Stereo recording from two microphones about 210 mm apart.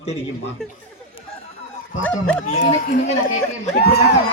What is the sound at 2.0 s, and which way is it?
Speech, 10° left (ahead or behind).